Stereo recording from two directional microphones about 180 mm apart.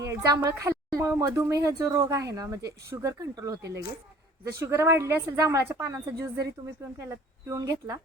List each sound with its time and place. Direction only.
0.1 s a woman's voice: 15° right (ahead or behind)